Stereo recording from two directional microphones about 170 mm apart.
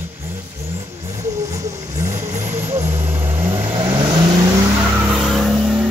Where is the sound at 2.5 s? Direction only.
15° right (ahead or behind).